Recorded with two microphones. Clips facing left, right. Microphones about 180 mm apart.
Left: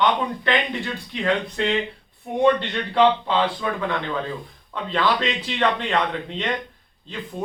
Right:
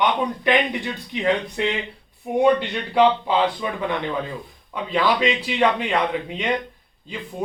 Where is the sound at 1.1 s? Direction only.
15° right (ahead or behind).